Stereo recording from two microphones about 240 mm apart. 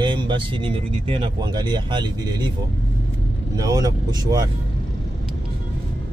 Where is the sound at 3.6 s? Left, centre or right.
Centre.